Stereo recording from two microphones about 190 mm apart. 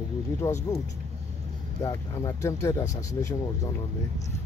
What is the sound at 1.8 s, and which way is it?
Speech, 15° left (ahead or behind).